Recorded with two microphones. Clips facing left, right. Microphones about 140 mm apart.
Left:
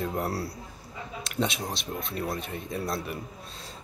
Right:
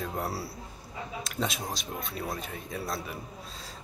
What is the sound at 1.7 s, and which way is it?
Speech, 65° left (ahead or behind).